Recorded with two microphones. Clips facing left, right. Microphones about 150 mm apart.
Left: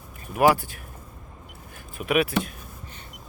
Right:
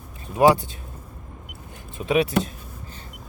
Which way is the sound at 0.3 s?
20° right (ahead or behind).